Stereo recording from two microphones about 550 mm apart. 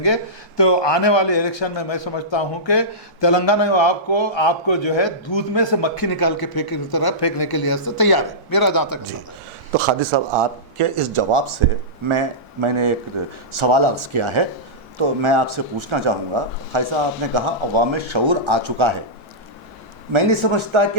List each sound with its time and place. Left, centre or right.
0.0 s a man's voice: left
9.7 s speech: right
20.1 s speech: right